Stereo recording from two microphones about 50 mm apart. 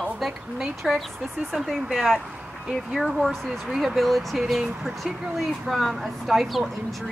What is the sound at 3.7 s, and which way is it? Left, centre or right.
Speech, centre.